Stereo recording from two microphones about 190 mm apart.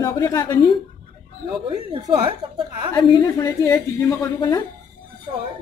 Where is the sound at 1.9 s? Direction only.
25° right (ahead or behind).